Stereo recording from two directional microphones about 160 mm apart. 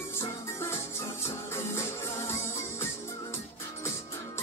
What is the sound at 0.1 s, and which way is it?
Music, 15° left (ahead or behind).